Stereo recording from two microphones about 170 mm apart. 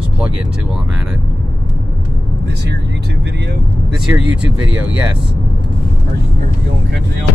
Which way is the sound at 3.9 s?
5° right (ahead or behind).